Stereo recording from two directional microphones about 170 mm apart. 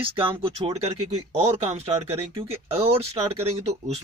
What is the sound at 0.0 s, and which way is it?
Speech, 30° right (ahead or behind).